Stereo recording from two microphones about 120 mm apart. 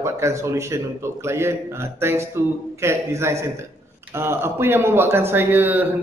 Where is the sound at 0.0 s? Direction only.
25° right (ahead or behind).